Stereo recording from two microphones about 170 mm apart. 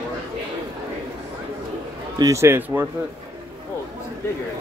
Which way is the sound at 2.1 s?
20° right (ahead or behind).